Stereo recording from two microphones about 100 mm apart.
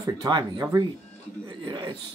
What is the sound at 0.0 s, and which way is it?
Speech, 35° right (ahead or behind).